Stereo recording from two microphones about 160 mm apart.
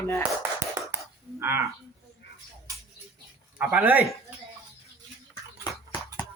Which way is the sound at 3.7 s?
10° right (ahead or behind).